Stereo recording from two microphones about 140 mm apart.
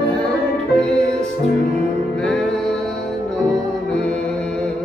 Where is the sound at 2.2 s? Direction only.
5° left (ahead or behind).